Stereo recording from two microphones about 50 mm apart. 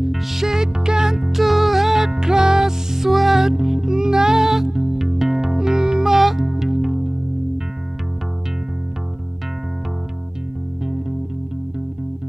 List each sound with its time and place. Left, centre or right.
0.0 s music: centre